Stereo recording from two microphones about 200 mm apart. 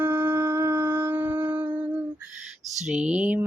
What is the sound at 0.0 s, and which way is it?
Shofar, 10° right (ahead or behind).